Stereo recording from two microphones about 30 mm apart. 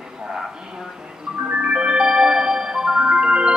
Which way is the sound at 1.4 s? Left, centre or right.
Right.